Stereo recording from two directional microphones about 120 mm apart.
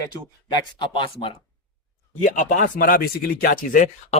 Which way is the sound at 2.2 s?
90° left.